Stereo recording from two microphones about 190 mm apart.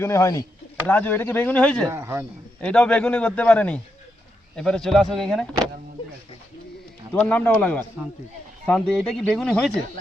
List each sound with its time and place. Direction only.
0.0 s a man's voice: 15° left (ahead or behind)
1.9 s a man's voice: 15° right (ahead or behind)
2.6 s a man's voice: 5° left (ahead or behind)
7.1 s a man's voice: 5° left (ahead or behind)